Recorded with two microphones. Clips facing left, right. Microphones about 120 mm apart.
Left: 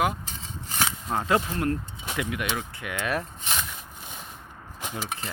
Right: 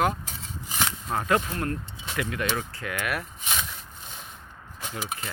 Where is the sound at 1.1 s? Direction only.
20° left (ahead or behind).